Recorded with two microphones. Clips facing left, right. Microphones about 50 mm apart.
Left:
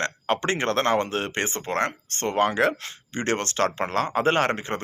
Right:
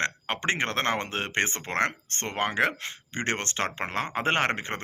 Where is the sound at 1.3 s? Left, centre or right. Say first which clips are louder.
Left 1 dB; right.